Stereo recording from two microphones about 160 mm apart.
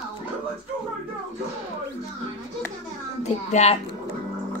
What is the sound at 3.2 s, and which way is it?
Speech, 45° left (ahead or behind).